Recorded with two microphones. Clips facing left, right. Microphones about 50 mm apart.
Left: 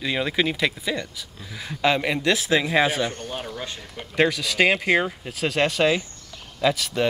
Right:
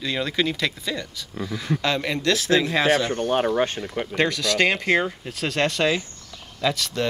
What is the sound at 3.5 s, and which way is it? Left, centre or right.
Speech, right.